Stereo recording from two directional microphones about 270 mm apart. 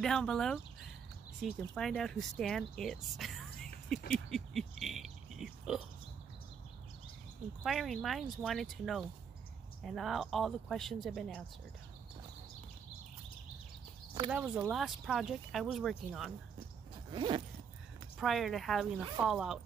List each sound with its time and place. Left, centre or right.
0.0 s speech: centre
4.1 s pig: centre
7.6 s speech: centre
14.3 s speech: centre
17.1 s zipper: centre
18.2 s speech: centre